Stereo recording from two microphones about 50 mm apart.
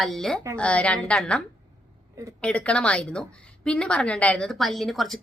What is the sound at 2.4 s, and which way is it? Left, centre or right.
A woman's voice, left.